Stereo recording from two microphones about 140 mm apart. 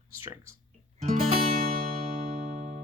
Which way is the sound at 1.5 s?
85° right.